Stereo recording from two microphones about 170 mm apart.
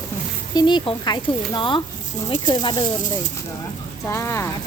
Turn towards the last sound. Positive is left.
turn(degrees=15)  # may be behind; listen again after turning